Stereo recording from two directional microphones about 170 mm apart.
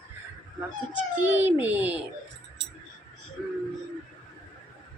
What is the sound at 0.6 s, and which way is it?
A child's voice, 10° right (ahead or behind).